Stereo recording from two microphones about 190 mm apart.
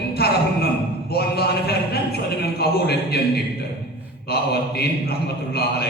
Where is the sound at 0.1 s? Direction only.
55° left (ahead or behind).